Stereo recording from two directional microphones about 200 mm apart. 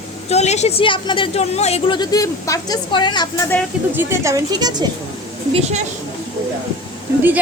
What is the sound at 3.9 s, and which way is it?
Speech, 15° right (ahead or behind).